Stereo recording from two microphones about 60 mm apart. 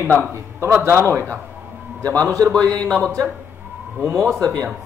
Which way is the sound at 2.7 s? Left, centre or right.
Centre.